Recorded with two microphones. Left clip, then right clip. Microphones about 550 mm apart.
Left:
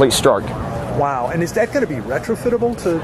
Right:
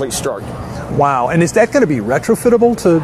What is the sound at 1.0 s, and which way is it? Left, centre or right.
Speech, right.